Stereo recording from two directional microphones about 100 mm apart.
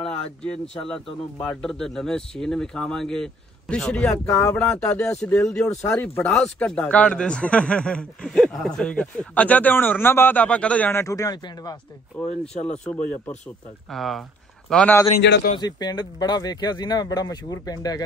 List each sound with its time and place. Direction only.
1.4 s speech: 10° left (ahead or behind)
4.3 s speech: 25° left (ahead or behind)
4.6 s speech: 10° left (ahead or behind)
10.9 s speech: 30° left (ahead or behind)
11.4 s speech: 50° left (ahead or behind)
12.2 s speech: 10° left (ahead or behind)
13.8 s speech: centre (ahead or behind)
14.7 s speech: 10° left (ahead or behind)
15.5 s speech: 45° left (ahead or behind)